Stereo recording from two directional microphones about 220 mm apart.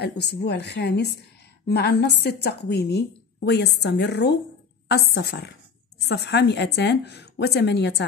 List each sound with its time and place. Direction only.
0.0 s a woman's voice: 50° left (ahead or behind)